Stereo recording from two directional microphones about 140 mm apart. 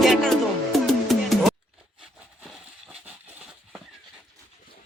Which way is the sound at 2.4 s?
Centre (ahead or behind).